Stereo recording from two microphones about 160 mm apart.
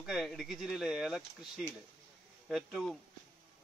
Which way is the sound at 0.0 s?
Centre (ahead or behind).